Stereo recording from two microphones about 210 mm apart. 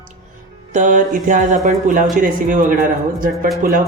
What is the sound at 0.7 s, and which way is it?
Speech, 35° right (ahead or behind).